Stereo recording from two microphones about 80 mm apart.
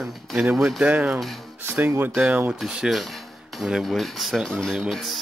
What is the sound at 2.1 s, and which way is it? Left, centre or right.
Speech, centre.